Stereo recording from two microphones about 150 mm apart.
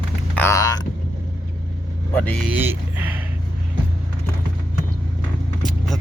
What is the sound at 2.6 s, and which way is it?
Speech, 10° right (ahead or behind).